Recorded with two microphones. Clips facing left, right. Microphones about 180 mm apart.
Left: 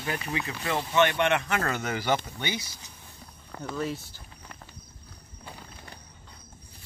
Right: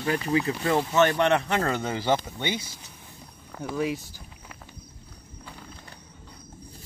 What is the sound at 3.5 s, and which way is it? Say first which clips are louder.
Speech: right 4 dB; 10° right (ahead or behind).